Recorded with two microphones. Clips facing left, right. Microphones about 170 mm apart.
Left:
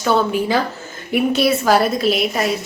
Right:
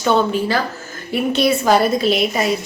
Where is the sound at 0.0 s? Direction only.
5° left (ahead or behind).